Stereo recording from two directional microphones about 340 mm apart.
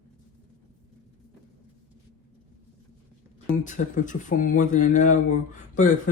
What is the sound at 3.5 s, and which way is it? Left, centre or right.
Speech, left.